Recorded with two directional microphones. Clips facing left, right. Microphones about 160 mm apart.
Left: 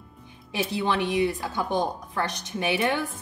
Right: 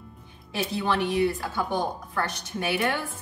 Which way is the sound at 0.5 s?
20° left (ahead or behind).